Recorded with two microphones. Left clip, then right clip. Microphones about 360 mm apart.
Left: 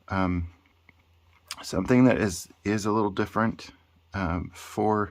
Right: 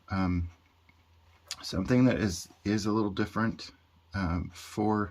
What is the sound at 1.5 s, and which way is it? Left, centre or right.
Speech, centre.